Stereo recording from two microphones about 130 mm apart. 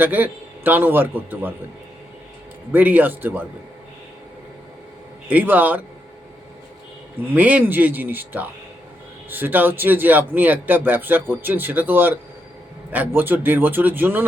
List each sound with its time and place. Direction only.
0.0 s speech: 15° right (ahead or behind)
2.7 s speech: 15° right (ahead or behind)
5.3 s speech: 15° right (ahead or behind)
7.3 s speech: 10° right (ahead or behind)